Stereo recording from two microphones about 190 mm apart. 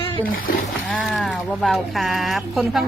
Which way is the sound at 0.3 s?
50° left (ahead or behind).